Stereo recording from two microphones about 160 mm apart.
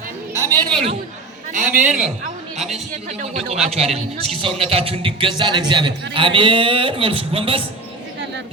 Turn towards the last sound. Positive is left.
turn(degrees=-35)  # may be behind; listen again after turning